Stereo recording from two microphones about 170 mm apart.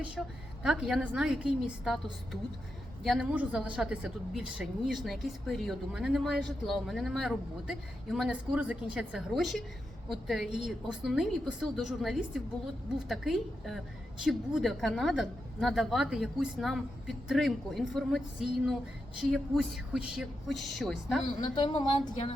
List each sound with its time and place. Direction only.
0.2 s speech: centre (ahead or behind)
3.0 s speech: 5° right (ahead or behind)
21.5 s speech: 25° left (ahead or behind)